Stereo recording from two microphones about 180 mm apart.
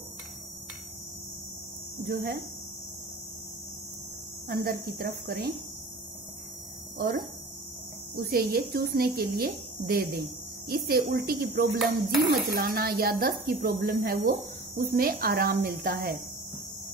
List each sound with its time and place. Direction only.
2.0 s a woman's voice: 55° right (ahead or behind)
4.5 s a woman's voice: 55° right (ahead or behind)
7.0 s a woman's voice: 55° right (ahead or behind)